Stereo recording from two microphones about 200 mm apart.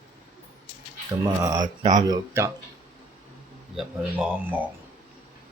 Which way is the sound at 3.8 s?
5° right (ahead or behind).